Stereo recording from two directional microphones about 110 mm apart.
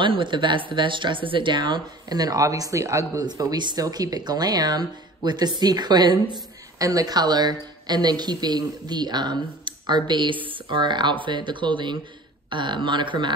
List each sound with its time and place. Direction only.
0.0 s a woman's voice: 50° right (ahead or behind)